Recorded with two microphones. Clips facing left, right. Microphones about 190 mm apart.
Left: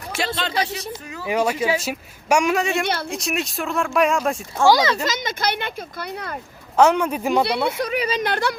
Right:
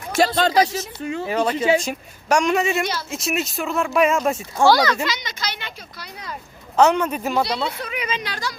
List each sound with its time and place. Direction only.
0.3 s speech: 40° right (ahead or behind)
1.0 s speech: 25° right (ahead or behind)
1.3 s a woman's voice: 10° left (ahead or behind)
2.8 s speech: 60° left (ahead or behind)
3.1 s speech: centre (ahead or behind)
4.6 s a woman's voice: 15° left (ahead or behind)
5.0 s speech: 50° left (ahead or behind)
6.7 s a woman's voice: 10° left (ahead or behind)
7.8 s a woman's voice: 35° left (ahead or behind)
8.2 s speech: 60° left (ahead or behind)